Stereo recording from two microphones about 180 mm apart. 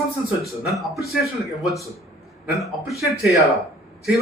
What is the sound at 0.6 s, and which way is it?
Speech, centre (ahead or behind).